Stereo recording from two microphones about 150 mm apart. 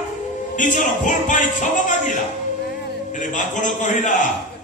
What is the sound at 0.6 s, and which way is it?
Speech, 55° left (ahead or behind).